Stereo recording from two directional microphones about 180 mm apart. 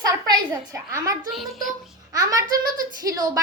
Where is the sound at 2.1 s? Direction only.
20° right (ahead or behind).